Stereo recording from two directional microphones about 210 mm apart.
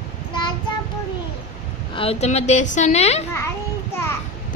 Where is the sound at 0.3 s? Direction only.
20° left (ahead or behind).